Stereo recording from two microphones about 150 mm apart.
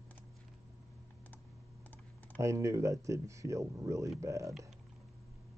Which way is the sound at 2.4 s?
20° right (ahead or behind).